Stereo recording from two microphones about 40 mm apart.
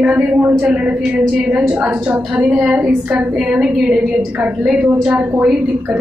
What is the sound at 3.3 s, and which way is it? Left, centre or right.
Speech, centre.